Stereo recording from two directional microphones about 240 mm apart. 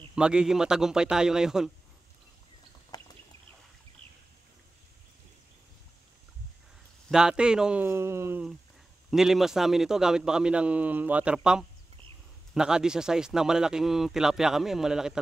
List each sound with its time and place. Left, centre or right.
0.1 s speech: centre
2.9 s a sound: centre
7.1 s speech: centre